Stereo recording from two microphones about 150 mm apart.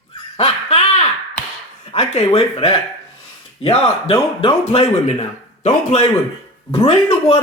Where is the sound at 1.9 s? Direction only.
45° left (ahead or behind).